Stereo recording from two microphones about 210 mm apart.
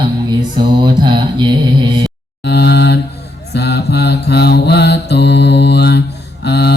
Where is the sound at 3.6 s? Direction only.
50° left (ahead or behind).